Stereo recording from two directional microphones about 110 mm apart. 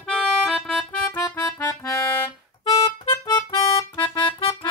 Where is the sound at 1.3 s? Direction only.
25° left (ahead or behind).